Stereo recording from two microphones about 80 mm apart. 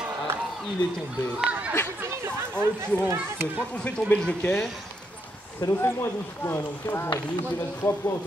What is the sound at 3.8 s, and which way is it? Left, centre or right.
Speech, centre.